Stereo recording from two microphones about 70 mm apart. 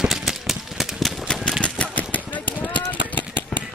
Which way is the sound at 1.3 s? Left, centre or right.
Centre.